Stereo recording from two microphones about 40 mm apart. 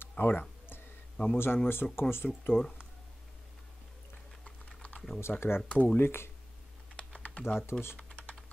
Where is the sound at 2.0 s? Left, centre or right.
Left.